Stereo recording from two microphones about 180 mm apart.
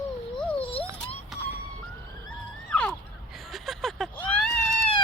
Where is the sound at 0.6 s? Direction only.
30° left (ahead or behind).